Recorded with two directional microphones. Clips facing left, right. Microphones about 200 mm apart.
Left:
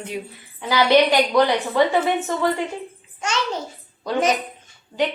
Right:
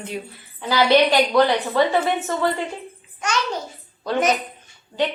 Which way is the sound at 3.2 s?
25° left (ahead or behind).